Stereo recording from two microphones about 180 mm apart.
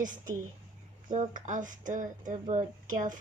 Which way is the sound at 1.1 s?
45° right (ahead or behind).